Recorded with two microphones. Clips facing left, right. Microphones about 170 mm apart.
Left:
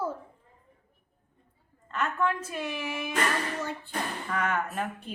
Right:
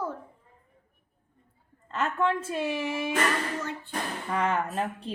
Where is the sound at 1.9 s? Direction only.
30° right (ahead or behind).